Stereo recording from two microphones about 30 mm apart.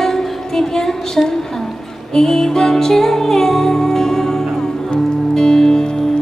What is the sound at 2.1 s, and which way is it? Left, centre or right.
Music, centre.